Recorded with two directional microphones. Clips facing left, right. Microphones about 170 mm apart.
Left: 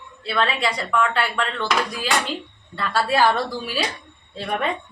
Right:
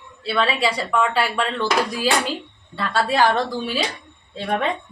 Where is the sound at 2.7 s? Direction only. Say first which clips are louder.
Right 1 dB; 5° left (ahead or behind).